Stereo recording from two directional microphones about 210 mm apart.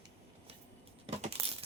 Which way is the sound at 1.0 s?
30° right (ahead or behind).